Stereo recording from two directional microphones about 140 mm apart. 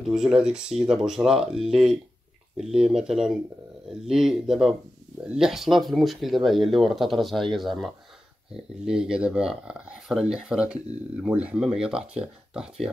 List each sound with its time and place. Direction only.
0.0 s speech: 5° right (ahead or behind)